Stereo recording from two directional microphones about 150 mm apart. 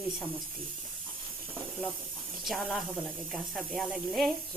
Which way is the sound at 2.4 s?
Centre (ahead or behind).